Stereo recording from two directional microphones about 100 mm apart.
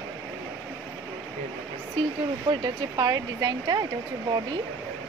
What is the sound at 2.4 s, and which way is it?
Speech, 45° right (ahead or behind).